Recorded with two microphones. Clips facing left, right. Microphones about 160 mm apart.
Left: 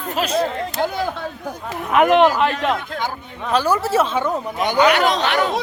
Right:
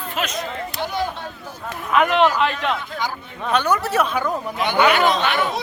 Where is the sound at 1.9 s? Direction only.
55° left (ahead or behind).